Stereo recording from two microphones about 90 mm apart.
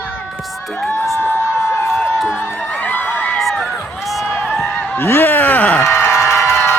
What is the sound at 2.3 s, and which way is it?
Music, 25° left (ahead or behind).